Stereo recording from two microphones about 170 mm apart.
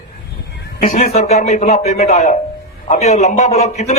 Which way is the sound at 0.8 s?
40° left (ahead or behind).